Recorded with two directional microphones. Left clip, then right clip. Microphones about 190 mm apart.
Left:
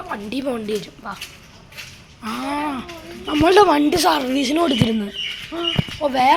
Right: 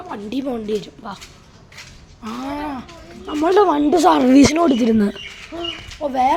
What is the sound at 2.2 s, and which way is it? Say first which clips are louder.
A woman's voice: left 3 dB; 10° right (ahead or behind).